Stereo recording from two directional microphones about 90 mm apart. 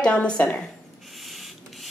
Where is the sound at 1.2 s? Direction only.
Centre (ahead or behind).